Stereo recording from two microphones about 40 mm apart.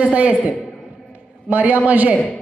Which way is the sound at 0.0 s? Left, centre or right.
Right.